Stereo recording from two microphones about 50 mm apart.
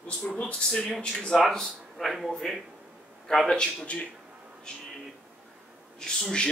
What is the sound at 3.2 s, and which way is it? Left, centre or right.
Speech, centre.